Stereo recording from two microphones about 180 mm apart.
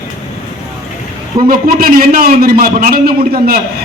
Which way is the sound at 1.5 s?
55° right (ahead or behind).